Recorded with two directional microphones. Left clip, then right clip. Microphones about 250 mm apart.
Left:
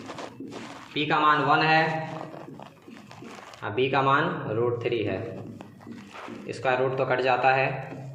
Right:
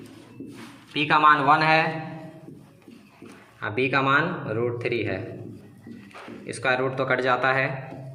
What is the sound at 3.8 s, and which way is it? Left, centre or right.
Speech, right.